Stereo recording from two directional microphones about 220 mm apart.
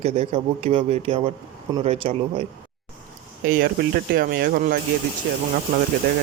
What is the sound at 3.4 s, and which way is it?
Speech, 40° right (ahead or behind).